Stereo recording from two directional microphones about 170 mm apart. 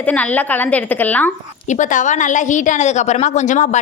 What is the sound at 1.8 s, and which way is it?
A woman's voice, 45° left (ahead or behind).